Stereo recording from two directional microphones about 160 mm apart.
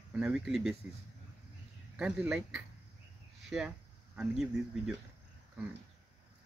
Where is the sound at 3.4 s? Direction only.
5° right (ahead or behind).